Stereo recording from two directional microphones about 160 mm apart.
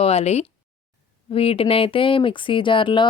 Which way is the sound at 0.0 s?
40° left (ahead or behind).